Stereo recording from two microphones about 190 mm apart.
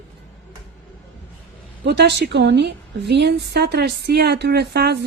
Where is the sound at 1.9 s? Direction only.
60° right (ahead or behind).